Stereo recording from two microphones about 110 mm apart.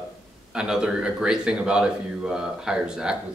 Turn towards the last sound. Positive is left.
turn(degrees=-5)  # may be behind; listen again after turning